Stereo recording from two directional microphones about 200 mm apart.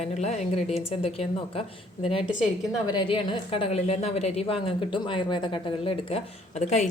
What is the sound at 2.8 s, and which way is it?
A woman's voice, 25° left (ahead or behind).